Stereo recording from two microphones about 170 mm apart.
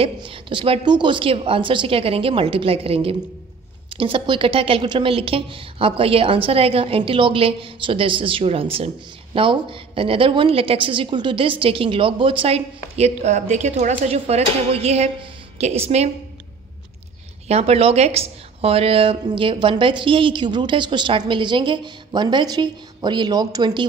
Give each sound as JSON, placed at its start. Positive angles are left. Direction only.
{"t": 0.0, "sound": "a woman's voice", "side_deg": -30}
{"t": 17.5, "sound": "a woman's voice", "side_deg": -35}